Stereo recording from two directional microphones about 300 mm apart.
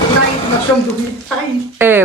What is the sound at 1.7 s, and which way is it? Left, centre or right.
Speech, centre.